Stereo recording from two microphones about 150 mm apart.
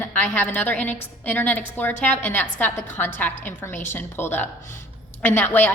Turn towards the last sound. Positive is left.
turn(degrees=15)  # may be behind; listen again after turning